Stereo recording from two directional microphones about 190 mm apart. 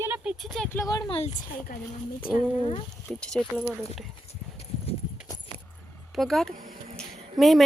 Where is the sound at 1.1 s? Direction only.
35° left (ahead or behind).